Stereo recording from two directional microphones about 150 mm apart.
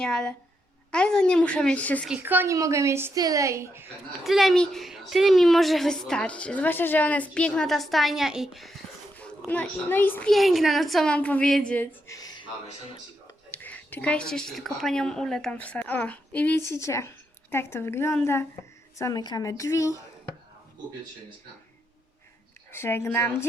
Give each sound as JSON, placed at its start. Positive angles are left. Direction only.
{"t": 0.0, "sound": "a woman's voice", "side_deg": 5}
{"t": 2.0, "sound": "a woman's voice", "side_deg": -10}
{"t": 4.2, "sound": "a woman's voice", "side_deg": 0}
{"t": 9.1, "sound": "a child's voice", "side_deg": 10}
{"t": 10.3, "sound": "a woman's voice", "side_deg": 0}
{"t": 13.5, "sound": "a woman's voice", "side_deg": 10}
{"t": 22.7, "sound": "a woman's voice", "side_deg": 15}